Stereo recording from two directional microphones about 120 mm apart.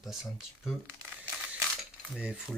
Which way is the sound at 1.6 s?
Centre (ahead or behind).